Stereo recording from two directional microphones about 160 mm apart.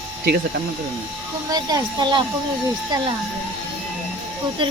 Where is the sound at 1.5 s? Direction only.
25° right (ahead or behind).